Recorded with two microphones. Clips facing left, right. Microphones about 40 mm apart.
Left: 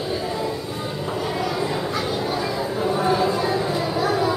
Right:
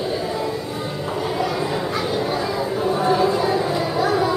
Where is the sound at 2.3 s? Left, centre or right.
Centre.